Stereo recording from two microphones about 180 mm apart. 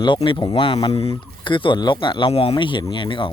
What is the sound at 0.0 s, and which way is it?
Speech, 25° left (ahead or behind).